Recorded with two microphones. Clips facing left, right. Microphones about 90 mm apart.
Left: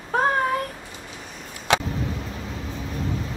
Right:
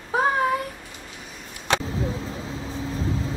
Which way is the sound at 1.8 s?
35° right (ahead or behind).